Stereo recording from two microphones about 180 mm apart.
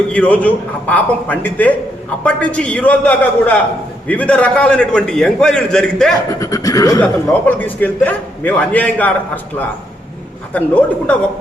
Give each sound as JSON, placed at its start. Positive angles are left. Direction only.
{"t": 0.1, "sound": "a man's voice", "side_deg": 10}
{"t": 6.4, "sound": "speech", "side_deg": 20}
{"t": 7.0, "sound": "a man's voice", "side_deg": 10}